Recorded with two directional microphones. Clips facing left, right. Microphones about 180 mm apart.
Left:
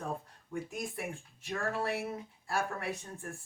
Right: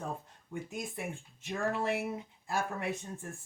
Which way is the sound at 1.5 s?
20° right (ahead or behind).